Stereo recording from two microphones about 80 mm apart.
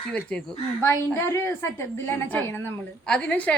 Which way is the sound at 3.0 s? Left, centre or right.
Centre.